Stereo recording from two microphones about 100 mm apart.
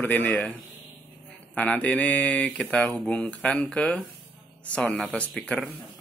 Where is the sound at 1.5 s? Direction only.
15° left (ahead or behind).